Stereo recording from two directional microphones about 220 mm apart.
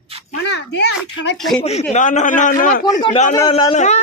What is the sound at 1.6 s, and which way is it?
A man's voice, 30° left (ahead or behind).